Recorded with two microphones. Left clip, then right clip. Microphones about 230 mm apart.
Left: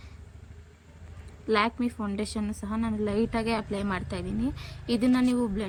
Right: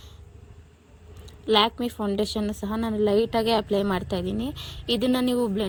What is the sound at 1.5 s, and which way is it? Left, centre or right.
A woman's voice, right.